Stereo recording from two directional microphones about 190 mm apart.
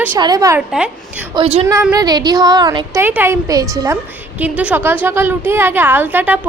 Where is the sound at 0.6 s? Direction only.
5° right (ahead or behind).